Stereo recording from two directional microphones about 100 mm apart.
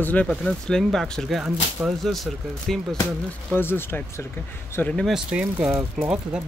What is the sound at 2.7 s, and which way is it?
Speech, centre (ahead or behind).